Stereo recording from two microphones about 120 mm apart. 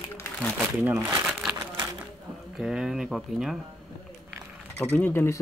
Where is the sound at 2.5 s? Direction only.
5° right (ahead or behind).